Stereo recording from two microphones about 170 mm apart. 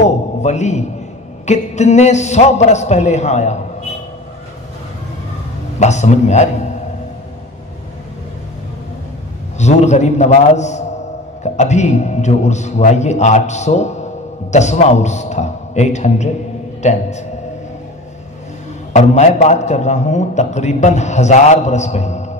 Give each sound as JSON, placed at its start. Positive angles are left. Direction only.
{"t": 0.0, "sound": "a sound", "side_deg": 40}
{"t": 1.4, "sound": "speech", "side_deg": 40}
{"t": 5.8, "sound": "a man's voice", "side_deg": 40}
{"t": 9.6, "sound": "a man's voice", "side_deg": 40}
{"t": 18.9, "sound": "a man's voice", "side_deg": 40}